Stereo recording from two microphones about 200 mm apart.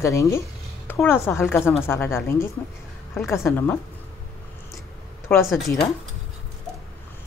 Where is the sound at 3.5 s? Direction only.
10° left (ahead or behind).